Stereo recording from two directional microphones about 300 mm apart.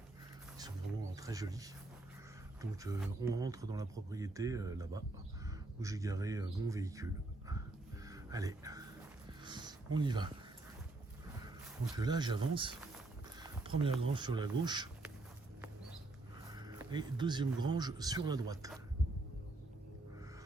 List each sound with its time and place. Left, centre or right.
1.1 s speech: centre
8.0 s music: centre
9.4 s a sound: centre
11.9 s speech: centre
13.7 s a sound: centre
14.1 s speech: centre
16.5 s speech: centre